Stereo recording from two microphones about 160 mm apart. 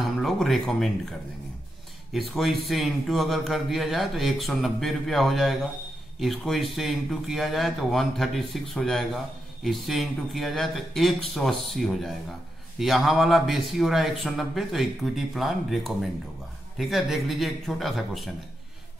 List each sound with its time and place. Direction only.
0.2 s speech: centre (ahead or behind)
2.1 s speech: centre (ahead or behind)